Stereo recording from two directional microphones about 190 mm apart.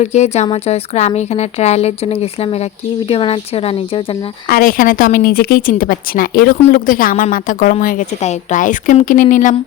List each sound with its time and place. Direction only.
0.0 s speech: 35° left (ahead or behind)
4.4 s a woman's voice: 50° left (ahead or behind)